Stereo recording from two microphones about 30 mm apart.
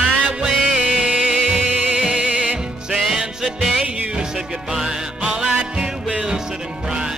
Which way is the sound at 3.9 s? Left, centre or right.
Right.